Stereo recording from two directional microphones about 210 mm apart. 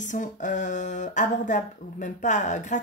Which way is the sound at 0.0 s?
35° left (ahead or behind).